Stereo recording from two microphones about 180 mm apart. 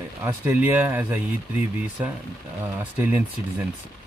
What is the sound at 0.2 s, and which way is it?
Speech, 10° right (ahead or behind).